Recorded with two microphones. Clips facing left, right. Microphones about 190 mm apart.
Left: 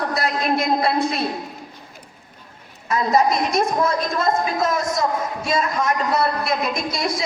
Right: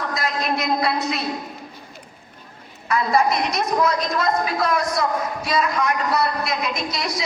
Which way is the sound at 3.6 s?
30° left (ahead or behind).